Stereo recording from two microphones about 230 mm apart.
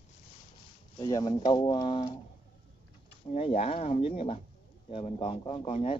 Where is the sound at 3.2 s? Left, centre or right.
Left.